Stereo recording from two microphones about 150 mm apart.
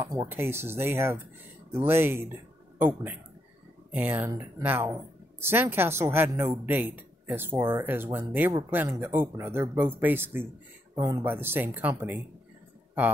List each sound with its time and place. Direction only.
0.0 s speech: 20° right (ahead or behind)